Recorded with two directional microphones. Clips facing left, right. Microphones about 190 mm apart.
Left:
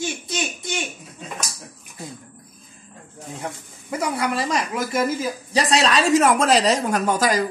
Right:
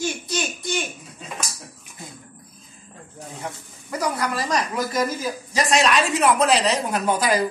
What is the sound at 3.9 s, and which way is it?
Speech, 25° left (ahead or behind).